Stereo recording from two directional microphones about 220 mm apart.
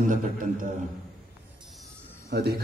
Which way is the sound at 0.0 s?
35° right (ahead or behind).